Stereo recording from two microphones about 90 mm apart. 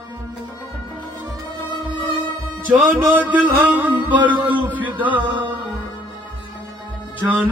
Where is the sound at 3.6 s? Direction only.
15° right (ahead or behind).